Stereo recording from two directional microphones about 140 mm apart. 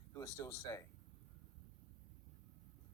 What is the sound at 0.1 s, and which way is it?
Speech, 25° left (ahead or behind).